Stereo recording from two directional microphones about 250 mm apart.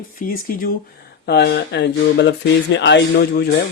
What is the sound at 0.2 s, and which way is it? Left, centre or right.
Speech, left.